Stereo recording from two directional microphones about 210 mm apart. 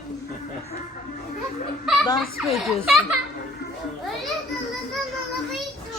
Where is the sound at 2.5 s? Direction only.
Centre (ahead or behind).